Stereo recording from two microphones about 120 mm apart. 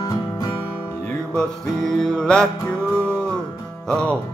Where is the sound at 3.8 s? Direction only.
10° left (ahead or behind).